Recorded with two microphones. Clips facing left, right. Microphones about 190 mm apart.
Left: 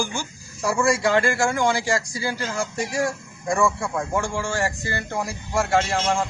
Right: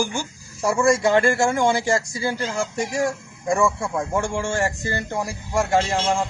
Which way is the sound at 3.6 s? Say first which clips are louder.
Left 1 dB; 20° right (ahead or behind).